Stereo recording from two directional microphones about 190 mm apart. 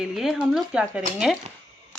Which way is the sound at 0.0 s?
Centre (ahead or behind).